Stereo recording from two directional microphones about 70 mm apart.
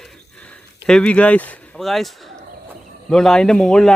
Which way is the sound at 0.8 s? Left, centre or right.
Centre.